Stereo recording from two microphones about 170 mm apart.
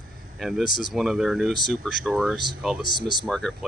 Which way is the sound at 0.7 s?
50° left (ahead or behind).